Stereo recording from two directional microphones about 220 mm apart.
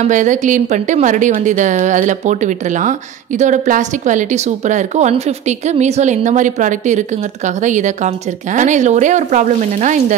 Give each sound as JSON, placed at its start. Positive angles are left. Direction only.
{"t": 0.0, "sound": "a woman's voice", "side_deg": -35}